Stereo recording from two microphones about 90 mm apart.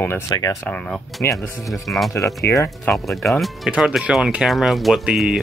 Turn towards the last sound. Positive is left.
turn(degrees=-10)  # may be behind; listen again after turning